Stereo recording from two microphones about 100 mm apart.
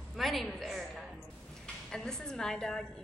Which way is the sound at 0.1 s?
Centre (ahead or behind).